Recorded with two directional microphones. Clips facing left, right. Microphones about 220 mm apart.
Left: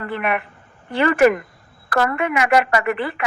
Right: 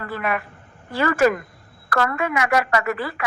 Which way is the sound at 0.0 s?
20° left (ahead or behind).